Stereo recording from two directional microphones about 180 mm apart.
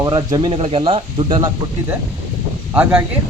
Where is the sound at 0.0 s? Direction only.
20° right (ahead or behind).